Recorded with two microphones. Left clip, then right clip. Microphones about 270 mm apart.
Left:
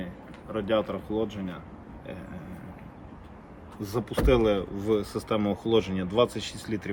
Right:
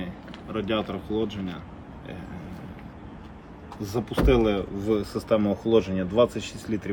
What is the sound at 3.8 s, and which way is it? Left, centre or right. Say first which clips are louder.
Speech: right 2 dB; left.